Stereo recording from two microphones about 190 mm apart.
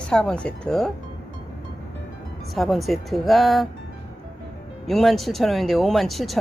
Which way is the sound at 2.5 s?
Centre (ahead or behind).